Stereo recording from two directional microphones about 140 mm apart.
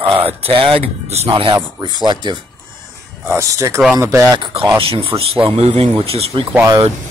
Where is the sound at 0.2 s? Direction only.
40° right (ahead or behind).